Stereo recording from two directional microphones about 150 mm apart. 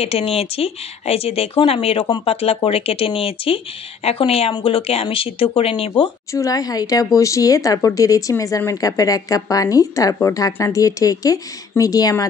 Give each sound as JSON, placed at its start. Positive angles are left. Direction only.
{"t": 0.0, "sound": "speech", "side_deg": 40}
{"t": 6.3, "sound": "speech", "side_deg": 25}